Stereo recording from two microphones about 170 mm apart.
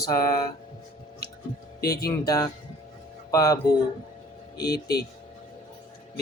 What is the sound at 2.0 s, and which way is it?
Speech, 20° left (ahead or behind).